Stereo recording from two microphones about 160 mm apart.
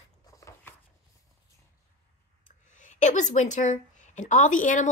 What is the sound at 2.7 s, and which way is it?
A woman's voice, 50° left (ahead or behind).